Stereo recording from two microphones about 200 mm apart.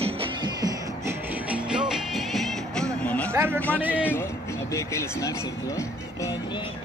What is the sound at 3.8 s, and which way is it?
Speech, 10° right (ahead or behind).